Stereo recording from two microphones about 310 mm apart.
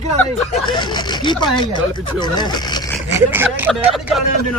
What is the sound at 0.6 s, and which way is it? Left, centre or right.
Speech, centre.